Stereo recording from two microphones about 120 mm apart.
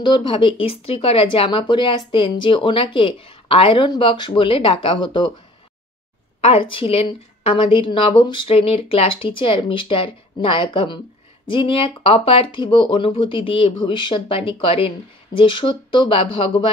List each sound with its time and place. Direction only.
0.0 s speech: 40° left (ahead or behind)
6.4 s speech: 50° left (ahead or behind)